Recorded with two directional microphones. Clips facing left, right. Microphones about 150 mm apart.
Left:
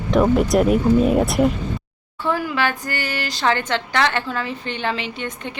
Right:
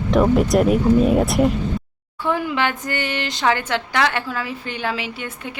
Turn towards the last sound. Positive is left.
turn(degrees=-5)  # may be behind; listen again after turning